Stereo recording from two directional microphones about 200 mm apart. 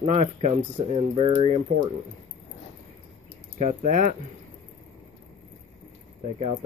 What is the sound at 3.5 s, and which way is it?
Speech, 35° right (ahead or behind).